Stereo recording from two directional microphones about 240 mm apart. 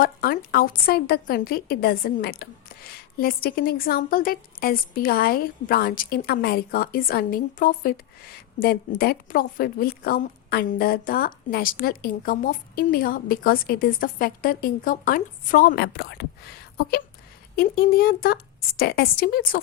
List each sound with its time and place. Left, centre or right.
0.0 s a woman's voice: left